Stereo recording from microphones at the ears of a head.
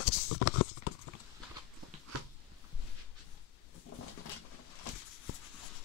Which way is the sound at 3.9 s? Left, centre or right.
Left.